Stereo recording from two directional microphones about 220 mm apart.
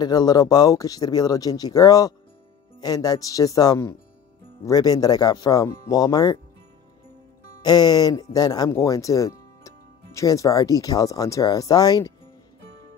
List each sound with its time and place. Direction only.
0.0 s speech: 20° left (ahead or behind)
7.6 s speech: 20° left (ahead or behind)